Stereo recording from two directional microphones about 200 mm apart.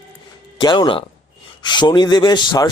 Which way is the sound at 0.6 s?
20° left (ahead or behind).